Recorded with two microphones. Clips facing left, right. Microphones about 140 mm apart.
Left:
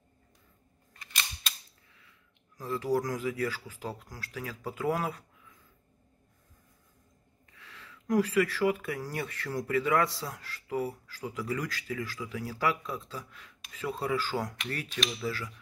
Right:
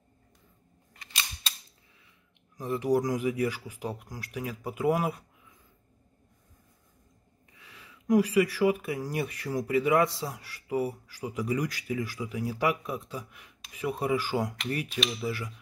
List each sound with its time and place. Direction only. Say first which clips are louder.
2.5 s speech: right 3 dB; 20° right (ahead or behind)
7.5 s speech: left 1 dB; 15° right (ahead or behind)